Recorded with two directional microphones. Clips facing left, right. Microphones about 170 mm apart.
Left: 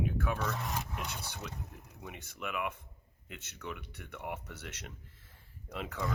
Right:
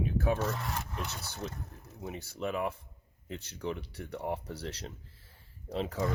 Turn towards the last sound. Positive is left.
turn(degrees=-30)  # may be behind; listen again after turning